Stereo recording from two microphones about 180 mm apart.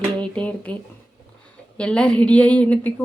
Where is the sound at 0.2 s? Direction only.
10° left (ahead or behind).